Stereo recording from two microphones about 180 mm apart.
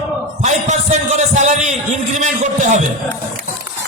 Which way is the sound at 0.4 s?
40° right (ahead or behind).